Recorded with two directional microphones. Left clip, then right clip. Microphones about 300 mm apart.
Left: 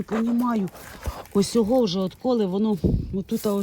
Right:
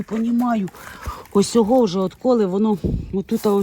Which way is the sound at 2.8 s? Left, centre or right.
Centre.